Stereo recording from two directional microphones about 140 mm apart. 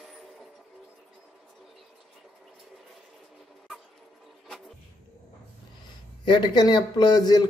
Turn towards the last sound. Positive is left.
turn(degrees=30)  # may be behind; listen again after turning